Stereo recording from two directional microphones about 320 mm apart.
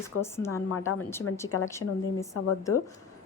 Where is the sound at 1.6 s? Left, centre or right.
Centre.